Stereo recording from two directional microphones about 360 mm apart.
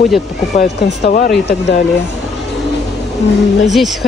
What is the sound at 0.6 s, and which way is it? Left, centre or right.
Speech, left.